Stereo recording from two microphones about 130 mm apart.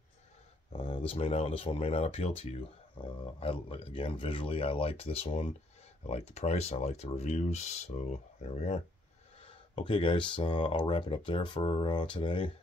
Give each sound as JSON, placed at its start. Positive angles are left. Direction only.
{"t": 0.7, "sound": "speech", "side_deg": 45}
{"t": 9.8, "sound": "speech", "side_deg": 40}